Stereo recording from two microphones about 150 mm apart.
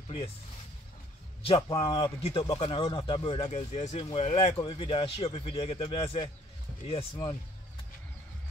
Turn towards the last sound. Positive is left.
turn(degrees=35)  # may be behind; listen again after turning